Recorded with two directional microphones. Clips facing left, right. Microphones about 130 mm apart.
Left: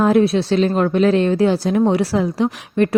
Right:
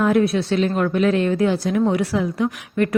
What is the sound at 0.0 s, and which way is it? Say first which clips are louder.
A woman's voice: left 3 dB; 30° left (ahead or behind).